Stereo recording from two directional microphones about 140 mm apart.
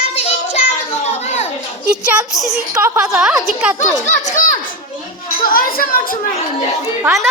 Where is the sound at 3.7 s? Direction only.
65° left (ahead or behind).